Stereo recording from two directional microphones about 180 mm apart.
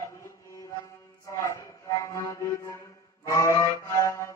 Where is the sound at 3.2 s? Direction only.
15° left (ahead or behind).